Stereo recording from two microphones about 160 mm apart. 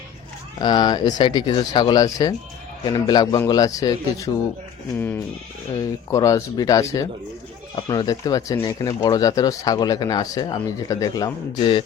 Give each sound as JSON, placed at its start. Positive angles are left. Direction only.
{"t": 0.6, "sound": "speech", "side_deg": 25}